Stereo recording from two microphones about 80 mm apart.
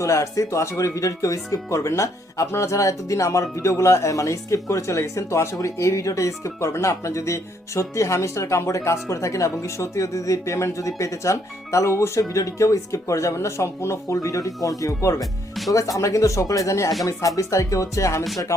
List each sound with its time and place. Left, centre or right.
0.0 s speech: left
15.2 s music: centre
15.7 s speech: left